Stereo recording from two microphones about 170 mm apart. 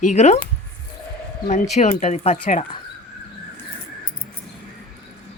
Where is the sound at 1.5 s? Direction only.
40° left (ahead or behind).